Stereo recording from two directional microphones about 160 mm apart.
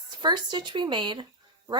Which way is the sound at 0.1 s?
30° right (ahead or behind).